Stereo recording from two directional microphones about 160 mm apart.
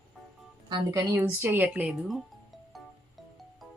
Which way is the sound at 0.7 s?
25° right (ahead or behind).